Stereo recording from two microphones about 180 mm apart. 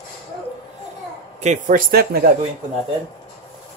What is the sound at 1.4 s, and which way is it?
Speech, 45° right (ahead or behind).